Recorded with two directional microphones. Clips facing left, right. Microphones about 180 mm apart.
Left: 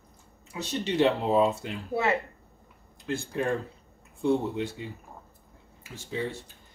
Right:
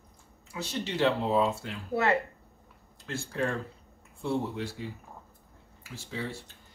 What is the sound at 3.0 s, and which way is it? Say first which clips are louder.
Speech: left 2 dB; 15° left (ahead or behind).